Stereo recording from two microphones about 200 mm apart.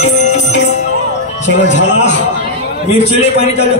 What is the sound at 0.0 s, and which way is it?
Music, 35° left (ahead or behind).